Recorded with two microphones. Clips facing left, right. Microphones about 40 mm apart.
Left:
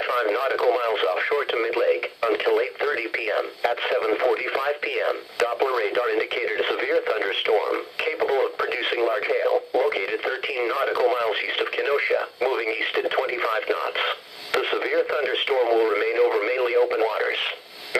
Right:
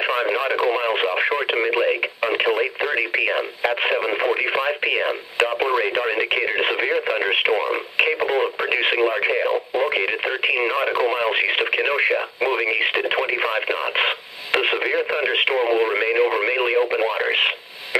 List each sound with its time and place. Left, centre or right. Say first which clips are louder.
0.0 s speech: right 2 dB; right